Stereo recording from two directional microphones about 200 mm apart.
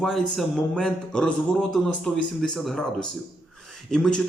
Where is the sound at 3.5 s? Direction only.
Centre (ahead or behind).